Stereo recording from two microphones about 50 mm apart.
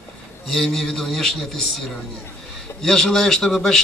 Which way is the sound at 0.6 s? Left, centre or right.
Centre.